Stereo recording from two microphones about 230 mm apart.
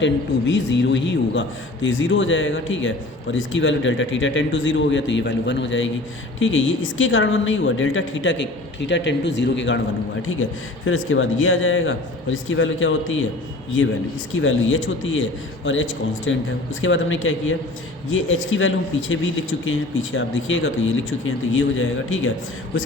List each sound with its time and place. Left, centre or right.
0.0 s a man's voice: left
10.8 s a man's voice: left